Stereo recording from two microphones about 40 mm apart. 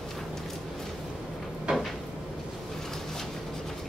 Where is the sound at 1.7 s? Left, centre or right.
Right.